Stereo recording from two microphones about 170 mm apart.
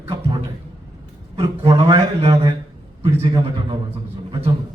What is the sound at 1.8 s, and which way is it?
Speech, 30° right (ahead or behind).